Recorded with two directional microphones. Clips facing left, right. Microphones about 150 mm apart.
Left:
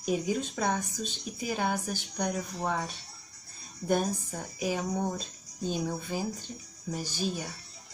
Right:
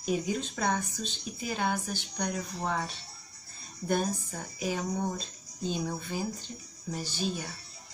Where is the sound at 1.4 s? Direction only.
10° left (ahead or behind).